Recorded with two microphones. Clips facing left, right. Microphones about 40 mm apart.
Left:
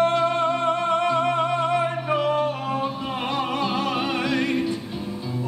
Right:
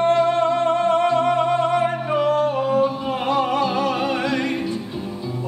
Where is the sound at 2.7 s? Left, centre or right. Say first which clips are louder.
Right 6 dB; centre.